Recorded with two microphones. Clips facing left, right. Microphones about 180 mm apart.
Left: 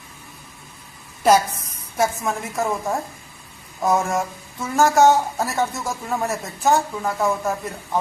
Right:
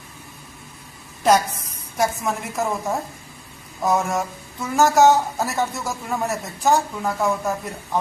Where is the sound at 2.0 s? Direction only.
Centre (ahead or behind).